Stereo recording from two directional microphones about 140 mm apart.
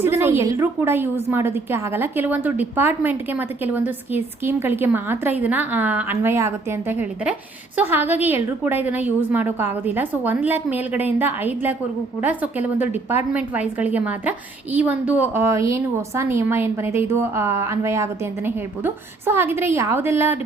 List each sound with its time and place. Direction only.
0.0 s a woman's voice: 20° right (ahead or behind)